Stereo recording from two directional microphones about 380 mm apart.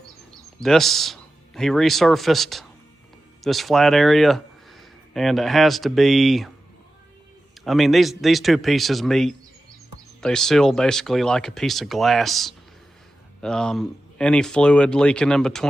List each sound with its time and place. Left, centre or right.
0.6 s speech: centre
7.6 s speech: centre